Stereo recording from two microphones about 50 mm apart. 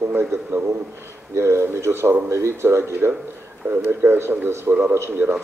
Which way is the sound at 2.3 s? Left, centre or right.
Right.